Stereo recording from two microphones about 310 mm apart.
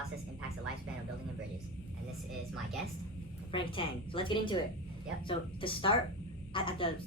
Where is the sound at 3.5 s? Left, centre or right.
Centre.